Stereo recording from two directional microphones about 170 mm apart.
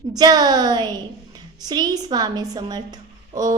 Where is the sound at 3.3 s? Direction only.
20° right (ahead or behind).